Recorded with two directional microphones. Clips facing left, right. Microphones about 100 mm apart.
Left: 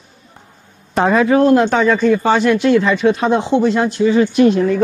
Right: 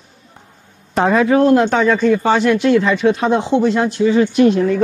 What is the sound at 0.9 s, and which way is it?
Speech, 20° left (ahead or behind).